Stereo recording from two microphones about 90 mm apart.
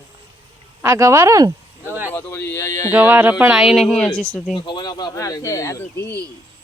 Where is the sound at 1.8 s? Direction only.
25° right (ahead or behind).